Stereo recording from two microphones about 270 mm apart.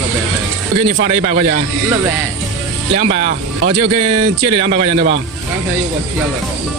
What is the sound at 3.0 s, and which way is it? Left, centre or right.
Speech, right.